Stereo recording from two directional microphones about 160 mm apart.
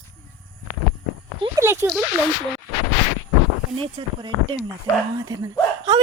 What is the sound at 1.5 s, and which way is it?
Speech, 15° right (ahead or behind).